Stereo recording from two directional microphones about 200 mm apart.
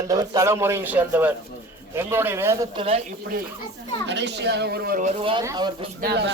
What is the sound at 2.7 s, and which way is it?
Speech, 30° right (ahead or behind).